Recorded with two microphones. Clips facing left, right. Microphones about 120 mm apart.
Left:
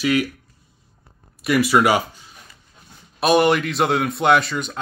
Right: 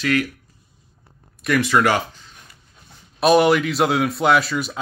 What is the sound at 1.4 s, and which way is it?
Speech, 10° left (ahead or behind).